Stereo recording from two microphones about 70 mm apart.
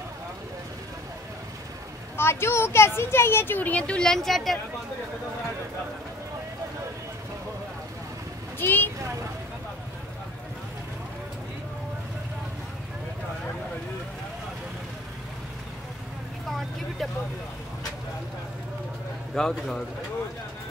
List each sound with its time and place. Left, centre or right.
2.1 s speech: left; by 4.6 s centre
8.5 s speech: left
16.4 s vehicle: centre
19.3 s speech: centre